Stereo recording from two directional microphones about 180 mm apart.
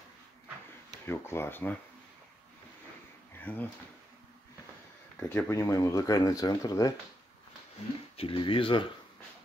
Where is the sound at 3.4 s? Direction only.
10° left (ahead or behind).